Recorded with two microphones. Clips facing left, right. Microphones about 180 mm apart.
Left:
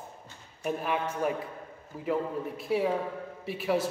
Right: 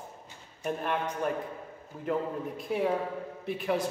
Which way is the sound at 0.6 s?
5° left (ahead or behind).